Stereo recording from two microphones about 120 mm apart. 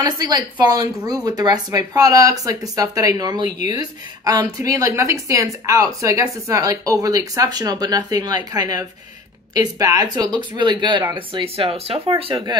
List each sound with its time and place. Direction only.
0.0 s speech: 35° right (ahead or behind)
3.4 s speech: 90° left
3.7 s a woman's voice: 30° right (ahead or behind); by 12.4 s 50° right (ahead or behind)